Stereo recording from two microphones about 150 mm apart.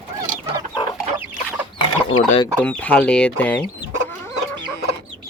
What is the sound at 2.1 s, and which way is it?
Speech, 55° left (ahead or behind).